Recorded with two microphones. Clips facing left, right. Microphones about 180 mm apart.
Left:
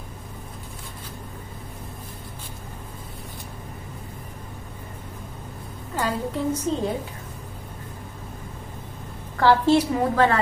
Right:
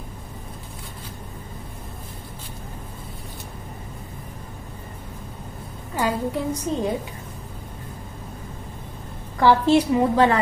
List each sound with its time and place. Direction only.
5.9 s a woman's voice: 10° right (ahead or behind)
9.4 s a woman's voice: 15° right (ahead or behind)